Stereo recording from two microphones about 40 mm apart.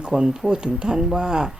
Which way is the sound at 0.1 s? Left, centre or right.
Centre.